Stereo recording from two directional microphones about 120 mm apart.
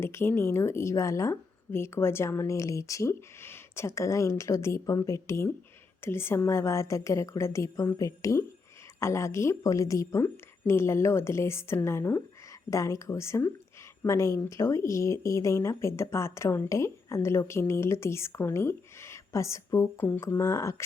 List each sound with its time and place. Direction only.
0.0 s speech: 20° left (ahead or behind)